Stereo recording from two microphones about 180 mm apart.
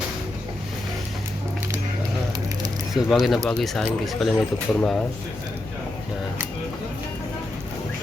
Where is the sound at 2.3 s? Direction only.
20° right (ahead or behind).